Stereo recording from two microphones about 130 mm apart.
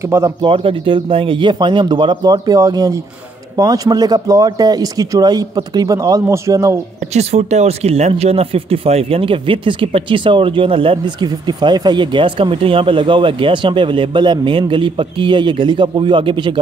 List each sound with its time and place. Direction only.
0.4 s a man's voice: 40° right (ahead or behind); by 6.8 s 25° right (ahead or behind)
7.2 s speech: 55° right (ahead or behind); by 16.5 s 40° right (ahead or behind)